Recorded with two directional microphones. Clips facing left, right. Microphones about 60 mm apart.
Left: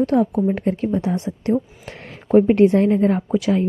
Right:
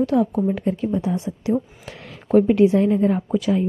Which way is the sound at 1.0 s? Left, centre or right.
Left.